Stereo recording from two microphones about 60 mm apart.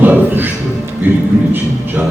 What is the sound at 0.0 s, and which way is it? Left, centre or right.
Music, right.